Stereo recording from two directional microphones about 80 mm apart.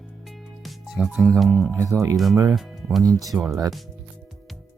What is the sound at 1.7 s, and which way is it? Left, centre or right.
Speech, right.